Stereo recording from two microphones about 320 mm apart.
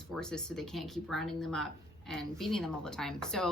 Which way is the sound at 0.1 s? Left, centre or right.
Centre.